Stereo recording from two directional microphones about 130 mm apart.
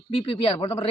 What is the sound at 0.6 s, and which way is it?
Speech, 25° left (ahead or behind).